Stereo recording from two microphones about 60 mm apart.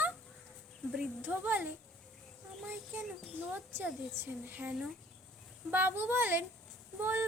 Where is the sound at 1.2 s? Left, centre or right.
Right.